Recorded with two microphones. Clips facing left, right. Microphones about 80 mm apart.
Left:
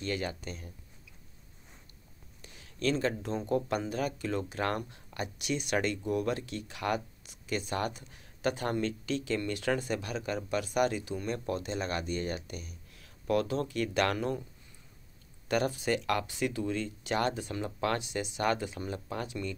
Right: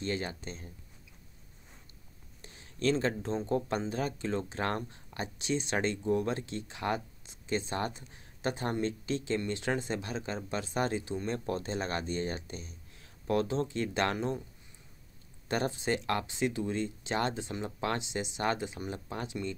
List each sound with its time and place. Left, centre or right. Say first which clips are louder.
0.0 s speech: even; right
2.4 s speech: right 2 dB; right
15.4 s speech: left 2 dB; right